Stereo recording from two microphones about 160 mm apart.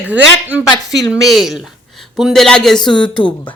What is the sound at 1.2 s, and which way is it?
A woman's voice, centre (ahead or behind).